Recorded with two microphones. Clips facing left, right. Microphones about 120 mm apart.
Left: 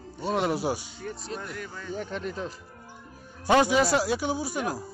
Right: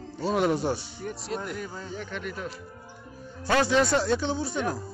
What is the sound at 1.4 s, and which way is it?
Speech, 25° right (ahead or behind).